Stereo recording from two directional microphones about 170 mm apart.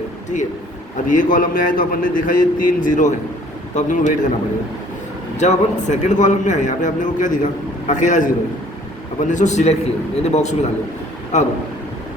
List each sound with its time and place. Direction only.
1.0 s a man's voice: 50° left (ahead or behind)
5.4 s a man's voice: 45° left (ahead or behind)